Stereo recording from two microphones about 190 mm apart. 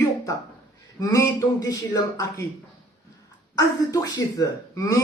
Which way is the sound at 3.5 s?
20° left (ahead or behind).